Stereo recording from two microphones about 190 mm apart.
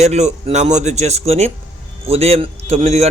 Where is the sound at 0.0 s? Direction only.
35° right (ahead or behind).